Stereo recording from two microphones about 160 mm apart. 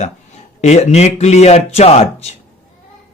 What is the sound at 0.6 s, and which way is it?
Speech, 45° left (ahead or behind).